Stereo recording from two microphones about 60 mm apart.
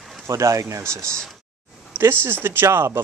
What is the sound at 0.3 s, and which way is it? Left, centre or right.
Speech, right.